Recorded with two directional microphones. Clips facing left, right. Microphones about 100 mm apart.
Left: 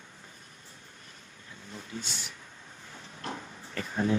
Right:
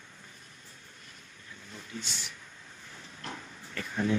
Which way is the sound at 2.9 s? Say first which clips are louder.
Left 4 dB; 30° left (ahead or behind).